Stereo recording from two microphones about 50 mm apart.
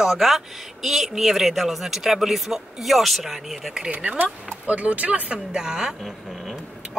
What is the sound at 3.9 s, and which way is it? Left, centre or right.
Speech, right.